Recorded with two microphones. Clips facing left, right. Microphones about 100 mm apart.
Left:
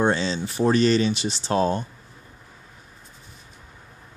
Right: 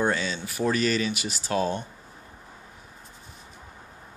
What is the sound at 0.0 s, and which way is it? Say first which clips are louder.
Speech: left 4 dB; 30° left (ahead or behind).